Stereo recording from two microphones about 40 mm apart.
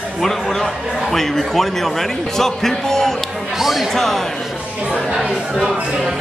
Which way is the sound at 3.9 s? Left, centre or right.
Centre.